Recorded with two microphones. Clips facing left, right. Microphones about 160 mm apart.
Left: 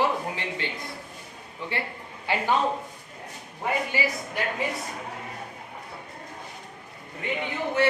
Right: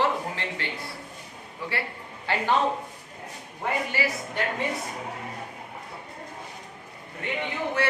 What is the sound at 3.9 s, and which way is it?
Speech, 15° left (ahead or behind).